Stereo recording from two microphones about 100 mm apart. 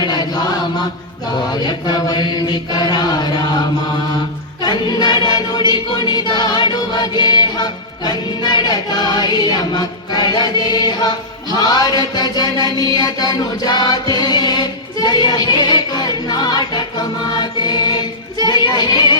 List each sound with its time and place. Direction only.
0.0 s chant: 40° left (ahead or behind)
1.6 s mantra: 45° left (ahead or behind)
4.6 s choir: 45° left (ahead or behind)
11.5 s chant: 40° left (ahead or behind)
12.8 s music: 40° left (ahead or behind)
17.6 s choir: 45° left (ahead or behind)